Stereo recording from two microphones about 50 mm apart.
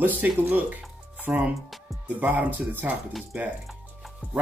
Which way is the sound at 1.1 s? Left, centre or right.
Right.